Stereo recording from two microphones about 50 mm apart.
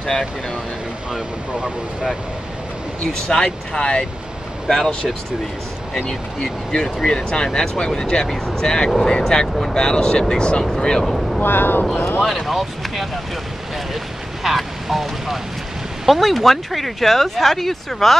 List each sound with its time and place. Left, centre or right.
1.1 s speech: centre
3.1 s speech: centre
6.0 s speech: centre
11.4 s speech: left
12.3 s speech: centre
14.4 s speech: centre